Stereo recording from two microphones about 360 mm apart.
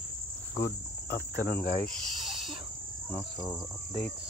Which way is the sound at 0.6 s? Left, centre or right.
Left.